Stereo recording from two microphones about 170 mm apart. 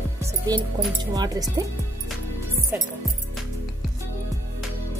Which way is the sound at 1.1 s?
20° right (ahead or behind).